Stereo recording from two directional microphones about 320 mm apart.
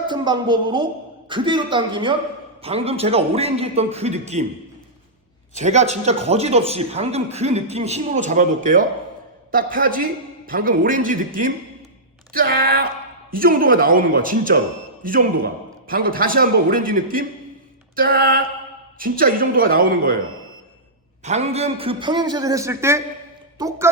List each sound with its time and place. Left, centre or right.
0.1 s a woman's voice: centre
5.5 s speech: right
21.2 s a man's voice: centre